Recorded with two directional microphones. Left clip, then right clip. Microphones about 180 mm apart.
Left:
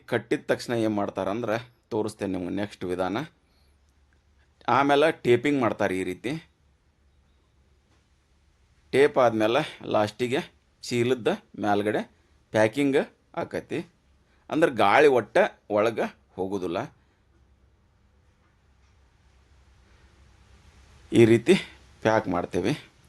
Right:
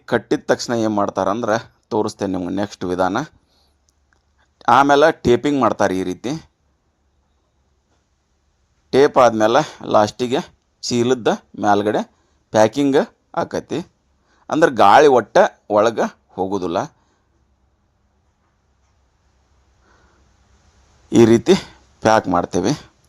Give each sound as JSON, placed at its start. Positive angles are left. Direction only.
{"t": 0.1, "sound": "speech", "side_deg": -35}
{"t": 8.9, "sound": "speech", "side_deg": -30}
{"t": 21.1, "sound": "speech", "side_deg": -35}